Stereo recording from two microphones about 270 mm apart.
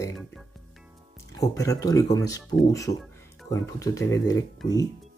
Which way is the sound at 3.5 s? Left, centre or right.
Centre.